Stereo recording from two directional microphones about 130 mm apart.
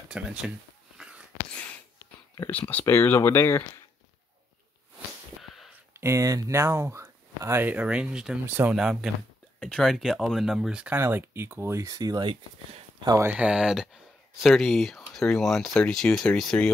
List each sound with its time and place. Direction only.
0.1 s speech: 5° right (ahead or behind)
0.9 s a sound: 5° right (ahead or behind)
2.5 s speech: 15° left (ahead or behind)
5.4 s a sound: centre (ahead or behind)
5.9 s speech: 20° right (ahead or behind)
8.7 s speech: 5° right (ahead or behind); by 13.3 s 25° right (ahead or behind)
13.3 s speech: 10° right (ahead or behind); by 16.7 s 5° left (ahead or behind)